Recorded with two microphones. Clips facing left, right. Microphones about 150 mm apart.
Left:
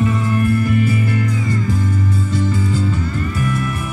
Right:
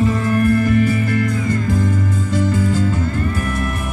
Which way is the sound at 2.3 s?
50° right (ahead or behind).